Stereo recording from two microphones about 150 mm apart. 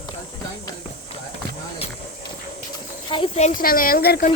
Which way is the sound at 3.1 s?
35° left (ahead or behind).